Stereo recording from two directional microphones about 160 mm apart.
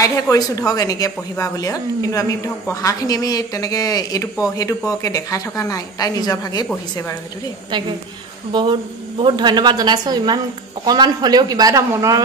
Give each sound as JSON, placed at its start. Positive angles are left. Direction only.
{"t": 0.0, "sound": "a woman's voice", "side_deg": 20}
{"t": 8.5, "sound": "a man's voice", "side_deg": -25}